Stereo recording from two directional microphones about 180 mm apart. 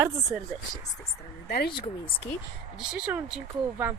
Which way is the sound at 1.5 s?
60° left (ahead or behind).